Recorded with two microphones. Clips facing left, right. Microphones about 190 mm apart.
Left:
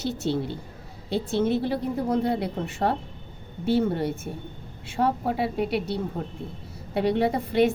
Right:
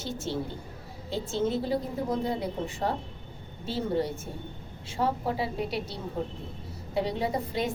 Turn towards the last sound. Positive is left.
turn(degrees=65)  # may be behind; listen again after turning